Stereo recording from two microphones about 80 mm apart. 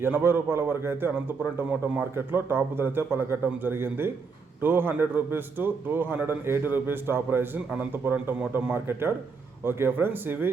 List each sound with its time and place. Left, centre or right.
0.0 s a man's voice: right
8.7 s a man's voice: right